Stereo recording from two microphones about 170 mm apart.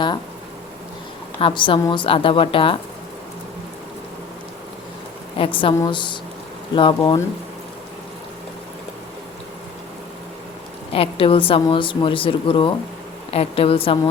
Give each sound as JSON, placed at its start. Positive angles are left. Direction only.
{"t": 1.4, "sound": "a woman's voice", "side_deg": 30}
{"t": 5.4, "sound": "a woman's voice", "side_deg": 30}
{"t": 10.9, "sound": "a woman's voice", "side_deg": 35}